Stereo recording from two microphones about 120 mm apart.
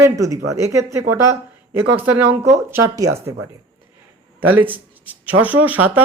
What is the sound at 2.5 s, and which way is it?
Speech, 25° right (ahead or behind).